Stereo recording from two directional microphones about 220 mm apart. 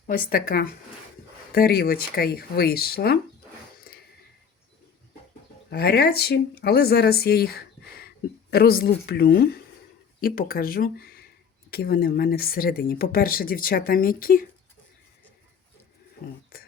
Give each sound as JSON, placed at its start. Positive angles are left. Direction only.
{"t": 0.1, "sound": "speech", "side_deg": 40}
{"t": 5.7, "sound": "speech", "side_deg": 45}
{"t": 16.5, "sound": "a sound", "side_deg": 45}